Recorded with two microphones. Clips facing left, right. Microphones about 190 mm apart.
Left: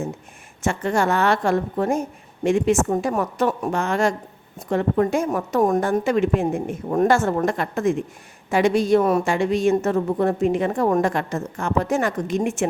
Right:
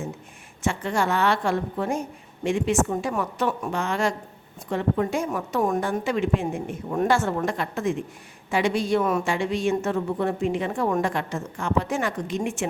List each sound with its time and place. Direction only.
0.6 s a woman's voice: 45° left (ahead or behind)